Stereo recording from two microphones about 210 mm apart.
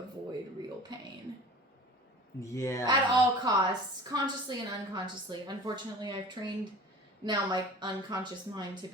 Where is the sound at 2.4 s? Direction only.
15° left (ahead or behind).